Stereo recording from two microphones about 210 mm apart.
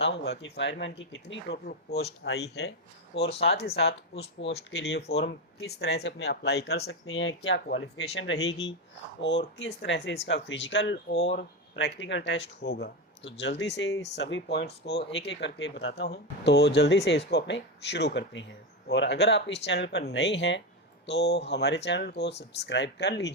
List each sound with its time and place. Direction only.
0.0 s speech: 55° left (ahead or behind)
7.1 s speech: 60° left (ahead or behind)